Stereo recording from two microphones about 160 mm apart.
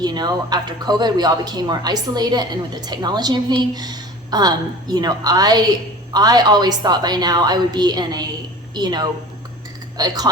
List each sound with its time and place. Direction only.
0.0 s speech: 25° right (ahead or behind)